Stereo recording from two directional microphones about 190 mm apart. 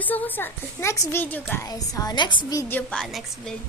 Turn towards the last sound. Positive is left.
turn(degrees=0)  # may be behind; listen again after turning